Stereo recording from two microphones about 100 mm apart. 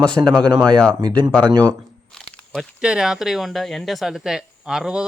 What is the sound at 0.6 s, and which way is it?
Speech, 10° left (ahead or behind).